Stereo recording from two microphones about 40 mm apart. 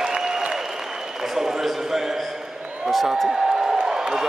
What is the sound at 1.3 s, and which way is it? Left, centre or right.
Speech, centre.